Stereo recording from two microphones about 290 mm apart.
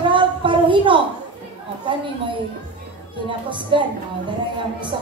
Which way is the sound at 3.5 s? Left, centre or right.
Centre.